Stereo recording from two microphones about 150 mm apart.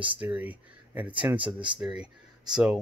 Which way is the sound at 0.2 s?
10° right (ahead or behind).